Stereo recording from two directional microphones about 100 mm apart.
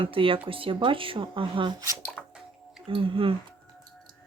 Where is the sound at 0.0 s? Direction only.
60° right (ahead or behind).